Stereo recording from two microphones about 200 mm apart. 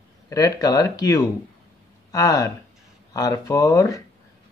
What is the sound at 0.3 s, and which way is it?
Speech, 15° left (ahead or behind).